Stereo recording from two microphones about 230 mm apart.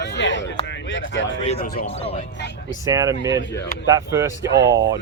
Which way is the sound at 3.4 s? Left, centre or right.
Left.